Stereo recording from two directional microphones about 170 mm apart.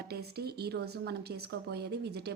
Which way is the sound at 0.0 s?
65° right (ahead or behind).